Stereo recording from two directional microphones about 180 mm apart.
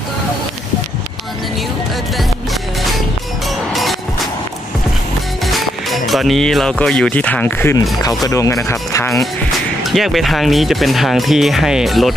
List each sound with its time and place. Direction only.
5.5 s speech: centre (ahead or behind); by 9.2 s 15° left (ahead or behind)
9.8 s speech: centre (ahead or behind)